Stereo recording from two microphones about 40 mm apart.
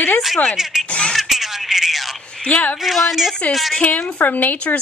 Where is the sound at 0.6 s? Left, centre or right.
Centre.